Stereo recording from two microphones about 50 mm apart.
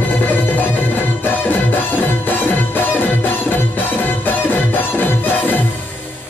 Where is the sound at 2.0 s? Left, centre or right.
Left.